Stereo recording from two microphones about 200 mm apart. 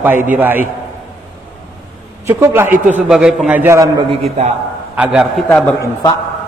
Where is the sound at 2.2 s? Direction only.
15° right (ahead or behind).